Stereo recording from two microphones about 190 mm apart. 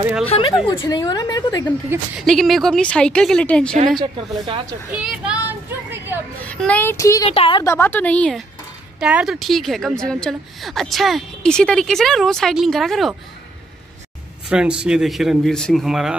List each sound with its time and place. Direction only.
0.2 s a woman's voice: 30° left (ahead or behind)
1.9 s a woman's voice: 10° right (ahead or behind)
2.2 s a woman's voice: centre (ahead or behind)
4.0 s a woman's voice: 25° right (ahead or behind)
4.9 s a child's voice: 5° right (ahead or behind)
6.4 s a woman's voice: 5° left (ahead or behind)
7.2 s a woman's voice: 30° left (ahead or behind)
7.6 s a woman's voice: 15° left (ahead or behind)
14.5 s a woman's voice: 5° right (ahead or behind)